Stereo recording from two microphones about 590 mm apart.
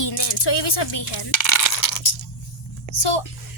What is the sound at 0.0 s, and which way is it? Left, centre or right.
Speech, left.